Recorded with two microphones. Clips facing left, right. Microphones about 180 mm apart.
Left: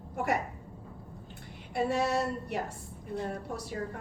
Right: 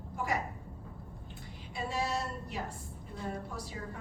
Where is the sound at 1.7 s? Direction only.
65° left (ahead or behind).